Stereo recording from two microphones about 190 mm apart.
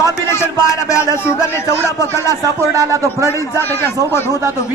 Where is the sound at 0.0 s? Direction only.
15° left (ahead or behind).